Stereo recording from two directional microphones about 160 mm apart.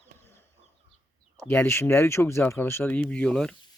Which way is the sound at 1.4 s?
15° left (ahead or behind).